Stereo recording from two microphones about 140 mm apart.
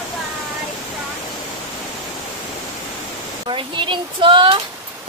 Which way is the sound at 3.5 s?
35° right (ahead or behind).